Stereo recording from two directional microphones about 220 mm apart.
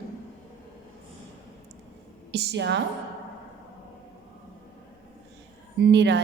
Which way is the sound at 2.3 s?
50° right (ahead or behind).